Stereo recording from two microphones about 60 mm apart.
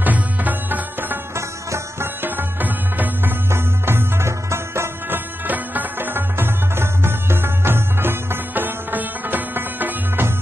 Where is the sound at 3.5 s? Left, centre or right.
Right.